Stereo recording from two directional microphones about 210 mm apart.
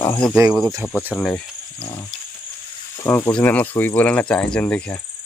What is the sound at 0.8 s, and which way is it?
Speech, 5° right (ahead or behind).